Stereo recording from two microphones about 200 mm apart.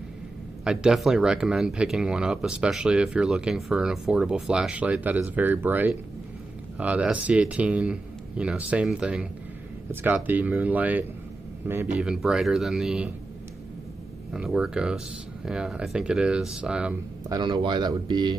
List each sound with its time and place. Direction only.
0.7 s speech: centre (ahead or behind)
14.3 s speech: 5° right (ahead or behind)
17.3 s speech: 25° right (ahead or behind)